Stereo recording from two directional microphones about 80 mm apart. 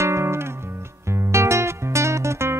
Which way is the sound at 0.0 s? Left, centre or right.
Right.